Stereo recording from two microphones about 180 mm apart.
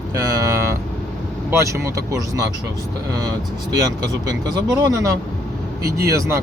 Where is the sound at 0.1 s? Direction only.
15° right (ahead or behind).